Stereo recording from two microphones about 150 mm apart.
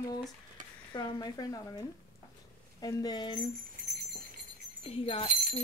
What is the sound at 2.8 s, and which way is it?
Speech, 25° left (ahead or behind).